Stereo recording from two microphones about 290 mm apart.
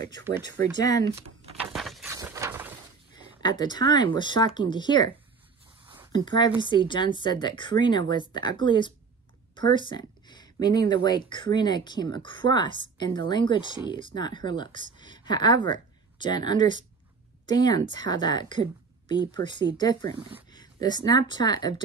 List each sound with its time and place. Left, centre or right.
0.8 s speech: centre
1.7 s a sound: centre
3.4 s speech: centre
6.1 s a woman's voice: centre